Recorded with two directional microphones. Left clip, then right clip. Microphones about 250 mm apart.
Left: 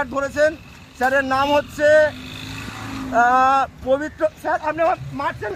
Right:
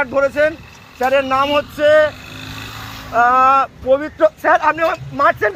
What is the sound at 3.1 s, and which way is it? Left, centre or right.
A man's voice, centre.